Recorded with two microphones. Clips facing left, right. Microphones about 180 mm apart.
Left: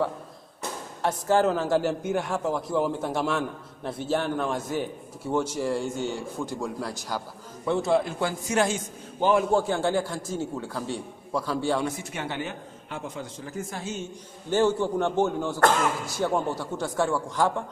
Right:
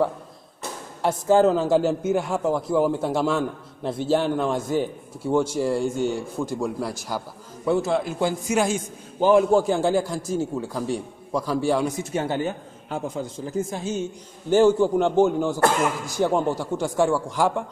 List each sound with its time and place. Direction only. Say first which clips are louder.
1.0 s a man's voice: right 5 dB; 10° right (ahead or behind)
12.1 s a man's voice: right 7 dB; 35° right (ahead or behind)
13.5 s a man's voice: right 7 dB; 20° right (ahead or behind)